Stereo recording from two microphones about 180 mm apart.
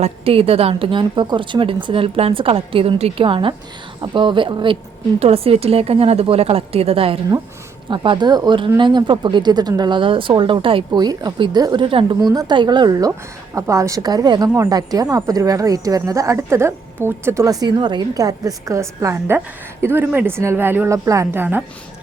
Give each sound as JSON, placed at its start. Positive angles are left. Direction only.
{"t": 0.0, "sound": "a woman's voice", "side_deg": -30}